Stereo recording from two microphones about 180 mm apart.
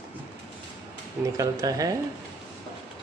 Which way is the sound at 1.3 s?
20° right (ahead or behind).